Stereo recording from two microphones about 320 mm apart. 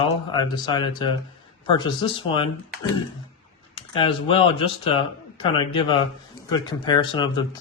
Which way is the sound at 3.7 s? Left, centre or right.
Centre.